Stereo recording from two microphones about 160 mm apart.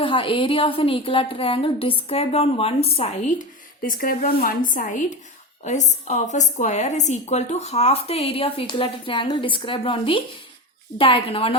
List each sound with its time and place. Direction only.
0.0 s a woman's voice: 35° left (ahead or behind); by 3.4 s 50° left (ahead or behind)
3.8 s a woman's voice: 60° left (ahead or behind); by 11.5 s 35° left (ahead or behind)